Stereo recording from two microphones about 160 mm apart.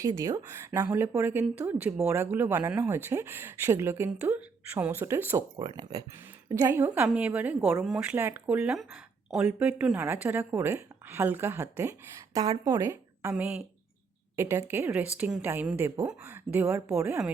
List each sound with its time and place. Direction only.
0.0 s speech: 20° right (ahead or behind)
5.5 s speech: 30° right (ahead or behind)